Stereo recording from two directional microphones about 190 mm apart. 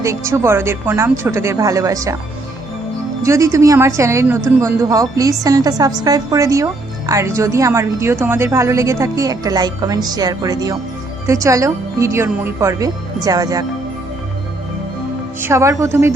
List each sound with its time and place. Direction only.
0.0 s speech: 15° right (ahead or behind)
3.2 s a woman's voice: 15° right (ahead or behind)
15.4 s speech: 15° right (ahead or behind)